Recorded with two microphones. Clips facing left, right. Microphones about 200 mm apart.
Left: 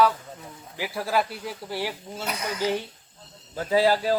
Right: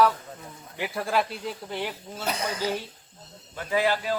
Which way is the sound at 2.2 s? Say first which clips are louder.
Right 2 dB; 30° right (ahead or behind).